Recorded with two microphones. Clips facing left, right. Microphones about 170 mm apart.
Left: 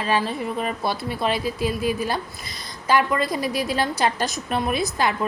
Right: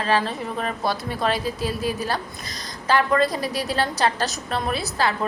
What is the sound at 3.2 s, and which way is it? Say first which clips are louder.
Speech: right 2 dB; 35° right (ahead or behind).